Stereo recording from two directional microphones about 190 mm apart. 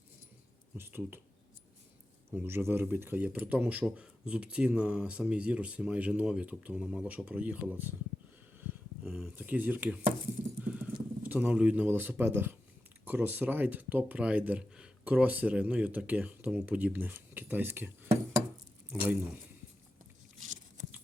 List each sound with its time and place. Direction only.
0.8 s speech: 10° right (ahead or behind)
2.3 s speech: 10° right (ahead or behind)
8.7 s a sound: 10° right (ahead or behind)
9.0 s speech: 5° right (ahead or behind)
10.6 s clip-clop: 5° right (ahead or behind)
11.2 s speech: 10° right (ahead or behind)
20.4 s biting: 40° right (ahead or behind)